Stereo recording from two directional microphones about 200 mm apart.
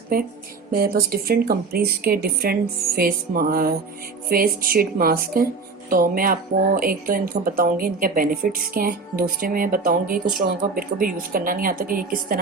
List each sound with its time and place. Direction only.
0.7 s a woman's voice: 45° right (ahead or behind)